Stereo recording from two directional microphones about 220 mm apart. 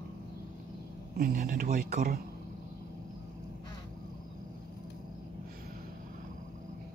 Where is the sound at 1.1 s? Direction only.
40° right (ahead or behind).